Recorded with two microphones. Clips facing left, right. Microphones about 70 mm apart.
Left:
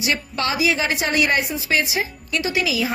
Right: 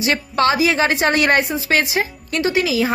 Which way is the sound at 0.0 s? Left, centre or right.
Right.